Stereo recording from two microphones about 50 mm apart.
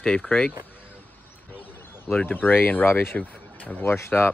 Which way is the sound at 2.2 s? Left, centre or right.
Left.